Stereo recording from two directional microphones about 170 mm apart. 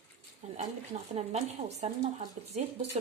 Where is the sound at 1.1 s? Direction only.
40° right (ahead or behind).